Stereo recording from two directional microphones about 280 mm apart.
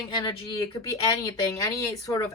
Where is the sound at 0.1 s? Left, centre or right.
Centre.